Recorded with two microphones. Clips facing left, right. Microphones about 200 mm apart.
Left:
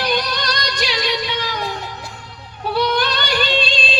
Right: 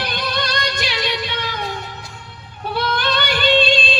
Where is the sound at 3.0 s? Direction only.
50° right (ahead or behind).